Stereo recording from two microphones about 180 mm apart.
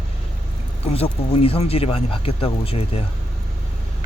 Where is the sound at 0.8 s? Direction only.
35° left (ahead or behind).